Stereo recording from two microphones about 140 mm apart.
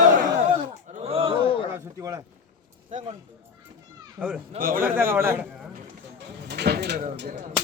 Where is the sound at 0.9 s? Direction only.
45° right (ahead or behind).